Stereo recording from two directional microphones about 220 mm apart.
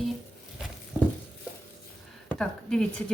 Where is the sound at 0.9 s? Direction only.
5° right (ahead or behind).